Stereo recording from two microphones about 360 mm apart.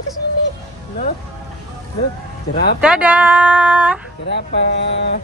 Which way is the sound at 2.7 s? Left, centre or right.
Centre.